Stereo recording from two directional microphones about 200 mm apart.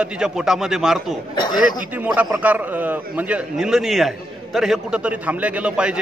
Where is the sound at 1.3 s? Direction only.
20° left (ahead or behind).